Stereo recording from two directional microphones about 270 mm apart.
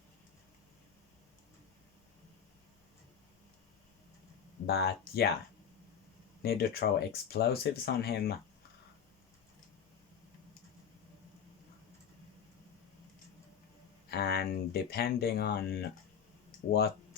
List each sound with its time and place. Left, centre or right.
4.6 s speech: left
6.4 s speech: left
14.1 s speech: left